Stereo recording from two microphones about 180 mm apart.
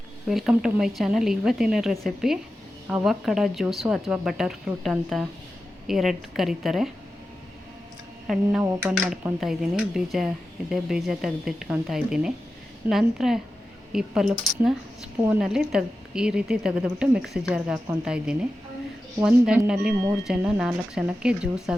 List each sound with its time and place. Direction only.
0.3 s speech: 5° right (ahead or behind)
8.3 s speech: centre (ahead or behind)